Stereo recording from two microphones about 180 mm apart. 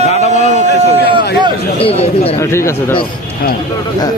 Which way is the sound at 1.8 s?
30° left (ahead or behind).